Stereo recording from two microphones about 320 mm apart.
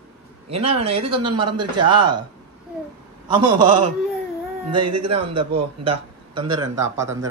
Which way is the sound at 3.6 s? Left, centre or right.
Right.